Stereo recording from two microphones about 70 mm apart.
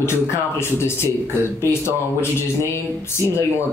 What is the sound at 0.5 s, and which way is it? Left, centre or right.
Speech, left.